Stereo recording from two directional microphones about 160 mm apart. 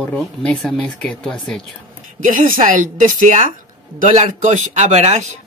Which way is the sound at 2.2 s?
55° right (ahead or behind).